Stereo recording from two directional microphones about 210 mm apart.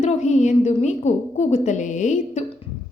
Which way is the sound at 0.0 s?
35° left (ahead or behind).